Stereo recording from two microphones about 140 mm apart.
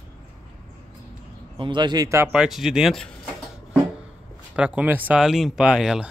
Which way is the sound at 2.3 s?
5° right (ahead or behind).